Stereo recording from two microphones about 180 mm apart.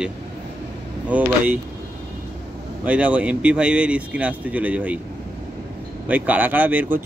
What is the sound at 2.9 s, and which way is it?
Speech, 5° right (ahead or behind).